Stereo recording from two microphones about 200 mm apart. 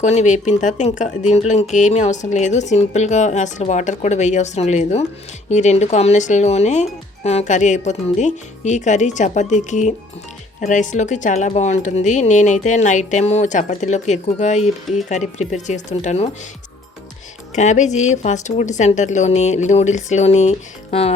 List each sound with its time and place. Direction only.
0.0 s speech: 35° left (ahead or behind)
17.5 s speech: 35° left (ahead or behind)